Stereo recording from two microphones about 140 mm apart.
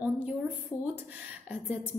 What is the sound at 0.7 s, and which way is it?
Speech, 30° left (ahead or behind).